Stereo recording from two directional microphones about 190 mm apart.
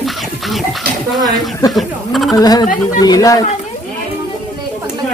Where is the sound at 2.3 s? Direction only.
20° left (ahead or behind).